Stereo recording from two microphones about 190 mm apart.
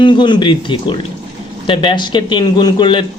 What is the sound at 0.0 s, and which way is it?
A man's voice, 25° left (ahead or behind).